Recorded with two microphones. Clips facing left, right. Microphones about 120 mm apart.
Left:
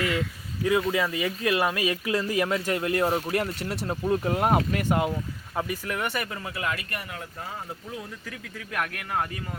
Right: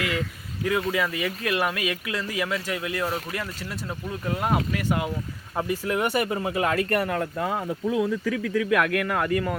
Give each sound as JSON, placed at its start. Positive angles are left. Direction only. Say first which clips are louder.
{"t": 0.6, "sound": "speech", "louder": "left 1 dB", "side_deg": 20}
{"t": 3.7, "sound": "speech", "louder": "left 7 dB", "side_deg": 30}
{"t": 5.5, "sound": "speech", "louder": "right 4 dB", "side_deg": -5}
{"t": 6.1, "sound": "speech", "louder": "right 8 dB", "side_deg": -25}
{"t": 7.0, "sound": "speech", "louder": "right 11 dB", "side_deg": -85}